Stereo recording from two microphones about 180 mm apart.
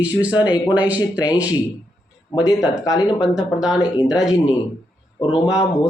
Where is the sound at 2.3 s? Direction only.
25° left (ahead or behind).